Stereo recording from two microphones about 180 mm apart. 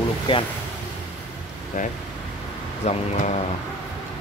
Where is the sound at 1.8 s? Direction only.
45° left (ahead or behind).